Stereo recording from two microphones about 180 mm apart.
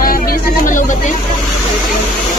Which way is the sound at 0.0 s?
55° left (ahead or behind).